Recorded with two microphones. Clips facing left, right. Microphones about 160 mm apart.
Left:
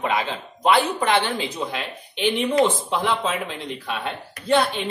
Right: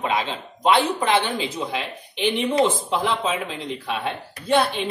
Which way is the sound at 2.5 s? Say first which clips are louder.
Even; 25° right (ahead or behind).